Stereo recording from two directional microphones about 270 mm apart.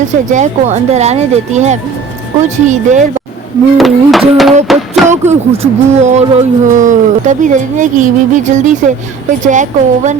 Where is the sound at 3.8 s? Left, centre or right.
Centre.